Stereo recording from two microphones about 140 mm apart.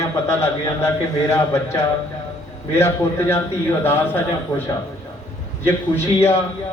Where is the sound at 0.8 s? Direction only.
20° left (ahead or behind).